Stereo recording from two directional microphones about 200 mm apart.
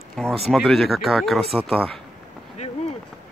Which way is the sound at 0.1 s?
Centre (ahead or behind).